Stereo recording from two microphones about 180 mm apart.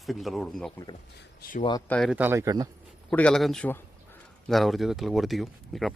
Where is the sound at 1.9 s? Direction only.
5° left (ahead or behind).